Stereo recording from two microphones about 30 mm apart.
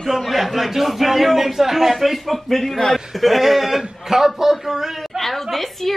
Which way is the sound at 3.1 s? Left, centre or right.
Centre.